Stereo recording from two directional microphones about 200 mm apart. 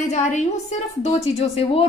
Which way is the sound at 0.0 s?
35° left (ahead or behind).